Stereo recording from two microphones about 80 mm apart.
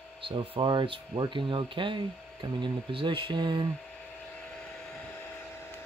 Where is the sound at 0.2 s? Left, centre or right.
Right.